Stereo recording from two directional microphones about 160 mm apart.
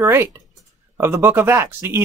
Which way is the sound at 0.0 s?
15° right (ahead or behind).